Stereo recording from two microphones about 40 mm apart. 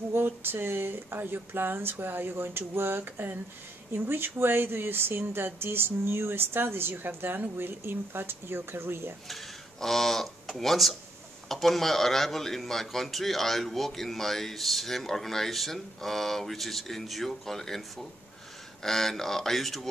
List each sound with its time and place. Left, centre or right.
0.1 s speech: right
9.3 s speech: centre